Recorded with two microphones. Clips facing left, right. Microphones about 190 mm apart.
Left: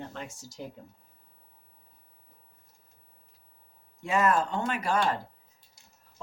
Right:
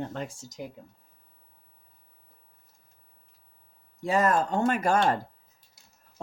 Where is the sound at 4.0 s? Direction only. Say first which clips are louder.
Right 1 dB; 35° right (ahead or behind).